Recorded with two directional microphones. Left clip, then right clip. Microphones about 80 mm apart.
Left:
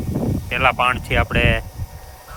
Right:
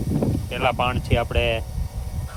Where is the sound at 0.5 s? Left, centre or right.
Left.